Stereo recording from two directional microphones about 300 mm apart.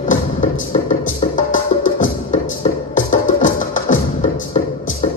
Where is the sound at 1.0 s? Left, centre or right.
Left.